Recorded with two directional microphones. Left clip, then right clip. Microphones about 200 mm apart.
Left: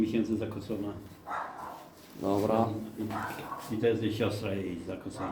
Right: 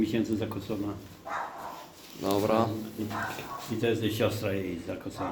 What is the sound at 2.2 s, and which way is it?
Speech, 5° left (ahead or behind).